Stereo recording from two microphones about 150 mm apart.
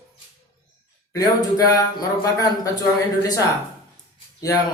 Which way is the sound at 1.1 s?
25° left (ahead or behind).